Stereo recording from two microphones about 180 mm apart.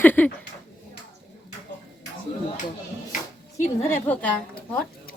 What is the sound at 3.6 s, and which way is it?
A woman's voice, 10° left (ahead or behind).